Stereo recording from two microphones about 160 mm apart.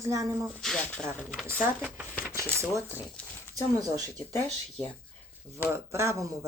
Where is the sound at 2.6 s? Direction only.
20° right (ahead or behind).